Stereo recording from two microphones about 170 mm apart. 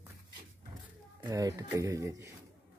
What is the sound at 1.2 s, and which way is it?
Speech, 20° right (ahead or behind).